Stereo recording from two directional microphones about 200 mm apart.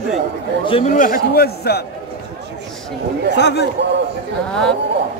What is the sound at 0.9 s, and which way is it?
Speech, 45° left (ahead or behind).